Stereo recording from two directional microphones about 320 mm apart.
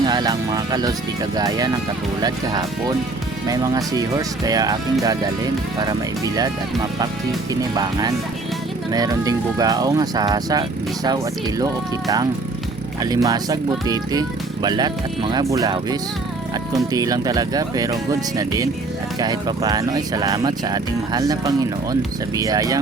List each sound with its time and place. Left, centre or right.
0.0 s speech: centre
7.8 s speech: centre